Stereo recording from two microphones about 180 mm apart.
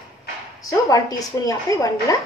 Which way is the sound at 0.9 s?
20° left (ahead or behind).